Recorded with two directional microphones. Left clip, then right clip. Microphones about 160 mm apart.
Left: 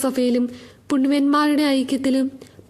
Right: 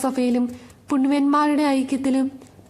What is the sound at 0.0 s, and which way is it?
A woman's voice, 30° left (ahead or behind).